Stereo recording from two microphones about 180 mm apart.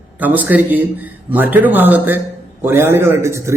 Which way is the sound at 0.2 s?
10° right (ahead or behind).